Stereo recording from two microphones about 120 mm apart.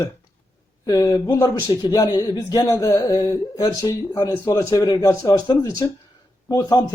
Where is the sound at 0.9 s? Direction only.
30° left (ahead or behind).